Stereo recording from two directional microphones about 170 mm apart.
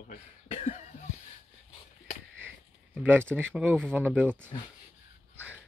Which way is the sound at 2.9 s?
10° right (ahead or behind).